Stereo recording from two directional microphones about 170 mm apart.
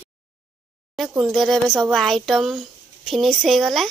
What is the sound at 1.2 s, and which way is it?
Speech, centre (ahead or behind).